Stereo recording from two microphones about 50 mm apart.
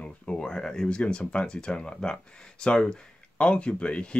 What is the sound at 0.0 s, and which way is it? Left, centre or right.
Speech, centre.